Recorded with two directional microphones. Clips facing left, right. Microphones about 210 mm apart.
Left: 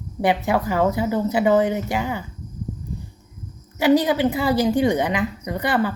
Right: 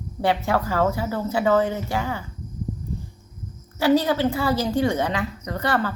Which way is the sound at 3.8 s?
15° left (ahead or behind).